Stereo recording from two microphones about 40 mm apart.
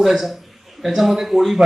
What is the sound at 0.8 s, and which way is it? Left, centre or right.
Speech, centre.